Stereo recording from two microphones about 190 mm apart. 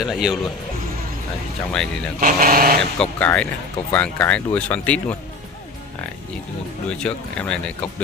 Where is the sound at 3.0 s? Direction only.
5° left (ahead or behind).